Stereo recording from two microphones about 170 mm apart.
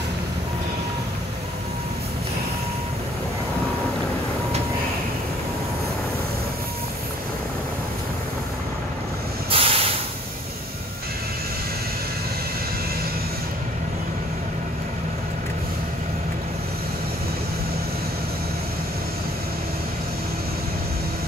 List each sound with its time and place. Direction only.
9.5 s hiss: 35° right (ahead or behind)